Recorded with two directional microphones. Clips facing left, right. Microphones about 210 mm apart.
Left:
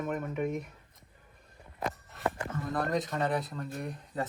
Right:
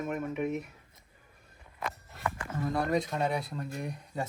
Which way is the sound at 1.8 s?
35° left (ahead or behind).